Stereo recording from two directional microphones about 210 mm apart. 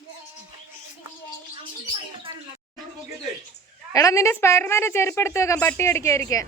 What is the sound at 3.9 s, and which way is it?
Speech, 15° left (ahead or behind).